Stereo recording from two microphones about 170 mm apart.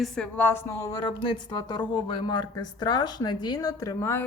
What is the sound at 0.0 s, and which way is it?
Speech, 5° left (ahead or behind).